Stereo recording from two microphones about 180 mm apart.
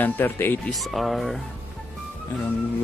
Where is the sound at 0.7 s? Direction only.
Centre (ahead or behind).